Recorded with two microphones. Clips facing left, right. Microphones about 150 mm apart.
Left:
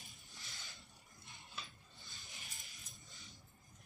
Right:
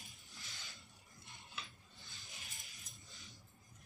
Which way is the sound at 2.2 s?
Centre (ahead or behind).